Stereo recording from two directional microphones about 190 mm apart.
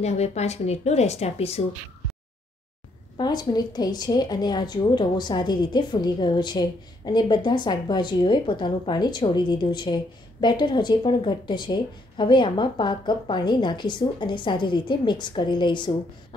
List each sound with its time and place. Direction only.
0.0 s a woman's voice: 35° left (ahead or behind)
3.2 s a woman's voice: 20° left (ahead or behind)